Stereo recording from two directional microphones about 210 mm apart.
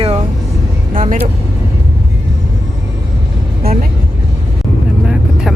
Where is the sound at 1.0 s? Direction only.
40° right (ahead or behind).